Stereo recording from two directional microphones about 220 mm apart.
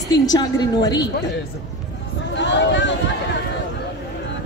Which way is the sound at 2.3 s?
55° left (ahead or behind).